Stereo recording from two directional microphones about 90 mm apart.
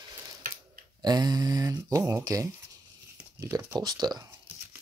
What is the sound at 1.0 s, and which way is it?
Speech, 50° right (ahead or behind).